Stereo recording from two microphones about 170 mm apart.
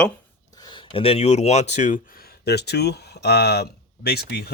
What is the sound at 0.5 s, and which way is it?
Speech, 25° left (ahead or behind).